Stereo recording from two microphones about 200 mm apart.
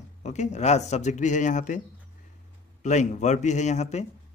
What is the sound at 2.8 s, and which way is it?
Speech, 35° left (ahead or behind).